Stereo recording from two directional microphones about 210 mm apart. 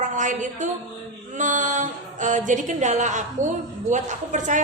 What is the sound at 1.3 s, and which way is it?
Mantra, 35° right (ahead or behind).